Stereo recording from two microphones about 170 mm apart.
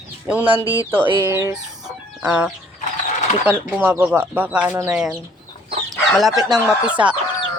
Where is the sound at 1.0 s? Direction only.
30° right (ahead or behind).